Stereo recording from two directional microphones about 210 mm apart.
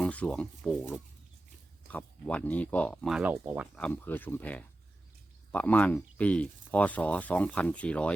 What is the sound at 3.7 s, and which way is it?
Speech, 5° left (ahead or behind).